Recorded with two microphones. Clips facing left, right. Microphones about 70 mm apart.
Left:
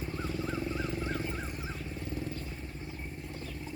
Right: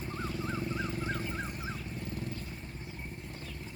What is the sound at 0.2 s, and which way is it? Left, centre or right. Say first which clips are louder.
Vehicle: left 1 dB; centre.